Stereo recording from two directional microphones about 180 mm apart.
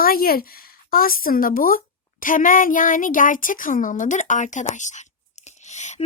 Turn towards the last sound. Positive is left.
turn(degrees=40)  # may be behind; listen again after turning